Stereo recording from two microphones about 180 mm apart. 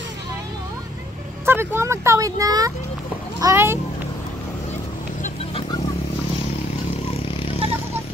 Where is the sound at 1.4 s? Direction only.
10° right (ahead or behind).